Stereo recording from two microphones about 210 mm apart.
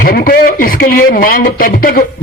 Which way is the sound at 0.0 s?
45° left (ahead or behind).